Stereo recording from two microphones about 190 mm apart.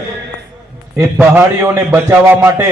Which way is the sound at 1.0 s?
10° right (ahead or behind).